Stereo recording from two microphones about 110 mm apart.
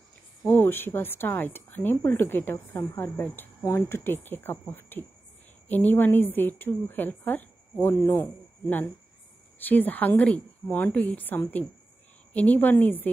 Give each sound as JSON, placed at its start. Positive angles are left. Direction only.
{"t": 0.5, "sound": "a woman's voice", "side_deg": 20}